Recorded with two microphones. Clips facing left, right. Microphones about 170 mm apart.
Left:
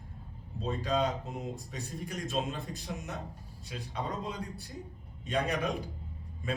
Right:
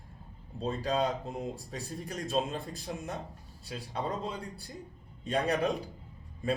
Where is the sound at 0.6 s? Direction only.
35° right (ahead or behind).